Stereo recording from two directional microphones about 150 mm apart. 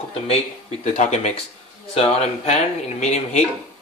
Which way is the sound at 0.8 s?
50° left (ahead or behind).